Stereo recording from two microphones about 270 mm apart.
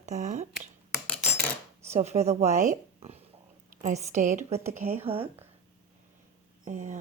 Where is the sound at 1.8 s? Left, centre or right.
Right.